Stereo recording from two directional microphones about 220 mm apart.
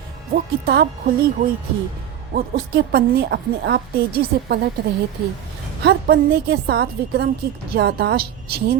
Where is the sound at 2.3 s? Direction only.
45° right (ahead or behind).